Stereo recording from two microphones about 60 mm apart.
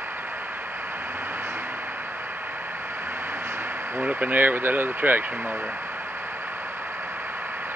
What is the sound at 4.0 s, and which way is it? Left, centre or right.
Speech, right.